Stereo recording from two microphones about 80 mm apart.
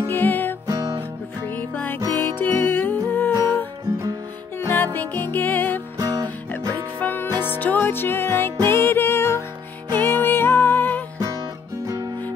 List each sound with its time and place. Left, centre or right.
0.1 s music: left
1.6 s music: left
2.0 s music: right
2.2 s music: left
4.6 s music: left
5.9 s music: right
6.7 s music: left
11.8 s music: right